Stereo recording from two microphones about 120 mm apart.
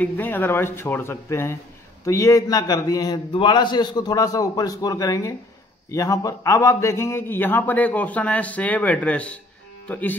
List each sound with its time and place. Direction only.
0.0 s a man's voice: 15° left (ahead or behind)